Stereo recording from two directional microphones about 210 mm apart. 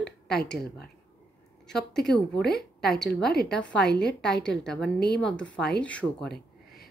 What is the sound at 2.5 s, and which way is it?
Speech, 50° left (ahead or behind).